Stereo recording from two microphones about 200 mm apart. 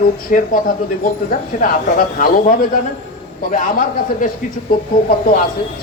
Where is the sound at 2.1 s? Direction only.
40° left (ahead or behind).